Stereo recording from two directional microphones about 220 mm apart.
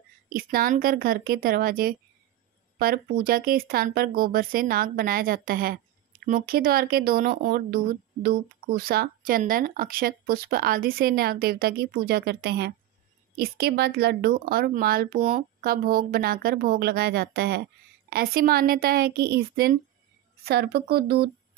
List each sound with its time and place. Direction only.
0.3 s speech: 40° right (ahead or behind)